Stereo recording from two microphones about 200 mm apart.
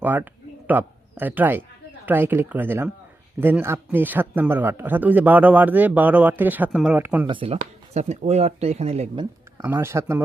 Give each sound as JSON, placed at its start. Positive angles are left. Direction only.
{"t": 0.0, "sound": "speech", "side_deg": -10}
{"t": 7.3, "sound": "speech", "side_deg": -25}
{"t": 9.6, "sound": "speech", "side_deg": -10}